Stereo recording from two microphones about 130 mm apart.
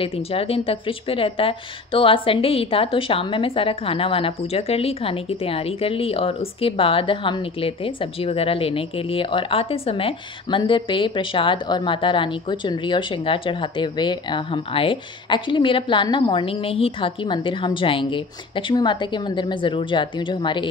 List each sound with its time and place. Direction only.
0.0 s a woman's voice: 45° left (ahead or behind)